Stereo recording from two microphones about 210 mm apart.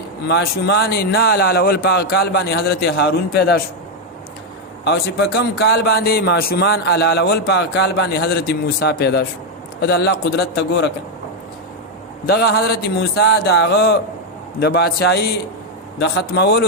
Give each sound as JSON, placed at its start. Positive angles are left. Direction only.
{"t": 0.3, "sound": "a man's voice", "side_deg": 50}
{"t": 4.9, "sound": "a man's voice", "side_deg": 50}
{"t": 12.2, "sound": "a man's voice", "side_deg": 50}